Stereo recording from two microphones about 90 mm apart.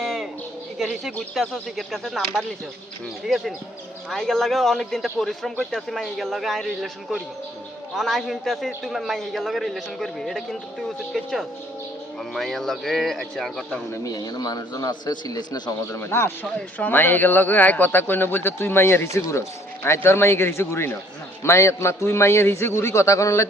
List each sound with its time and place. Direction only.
0.0 s bird: 5° left (ahead or behind)
0.8 s a man's voice: centre (ahead or behind)
13.9 s speech: 35° left (ahead or behind); by 15.7 s 55° left (ahead or behind)
15.9 s a man's voice: 30° left (ahead or behind)